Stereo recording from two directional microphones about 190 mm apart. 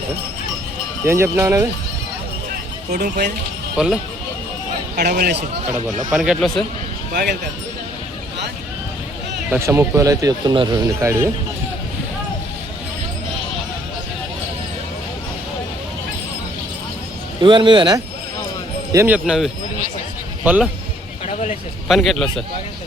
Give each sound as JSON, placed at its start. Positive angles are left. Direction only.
{"t": 1.0, "sound": "speech", "side_deg": -10}
{"t": 3.8, "sound": "speech", "side_deg": -5}
{"t": 4.9, "sound": "speech", "side_deg": -50}
{"t": 6.1, "sound": "speech", "side_deg": 0}
{"t": 7.1, "sound": "speech", "side_deg": -55}
{"t": 9.5, "sound": "speech", "side_deg": -15}
{"t": 17.4, "sound": "speech", "side_deg": -25}
{"t": 18.9, "sound": "speech", "side_deg": -10}
{"t": 21.8, "sound": "a man's voice", "side_deg": 0}